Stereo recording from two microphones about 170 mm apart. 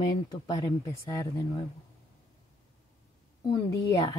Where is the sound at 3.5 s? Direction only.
20° left (ahead or behind).